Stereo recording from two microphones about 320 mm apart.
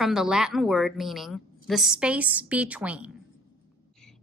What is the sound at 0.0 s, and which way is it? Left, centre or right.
A woman's voice, centre.